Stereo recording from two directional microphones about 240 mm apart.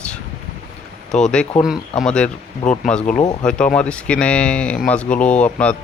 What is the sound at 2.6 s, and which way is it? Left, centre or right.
Speech, left.